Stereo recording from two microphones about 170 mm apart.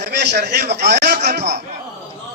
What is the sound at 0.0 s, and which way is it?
A man's voice, 75° right (ahead or behind).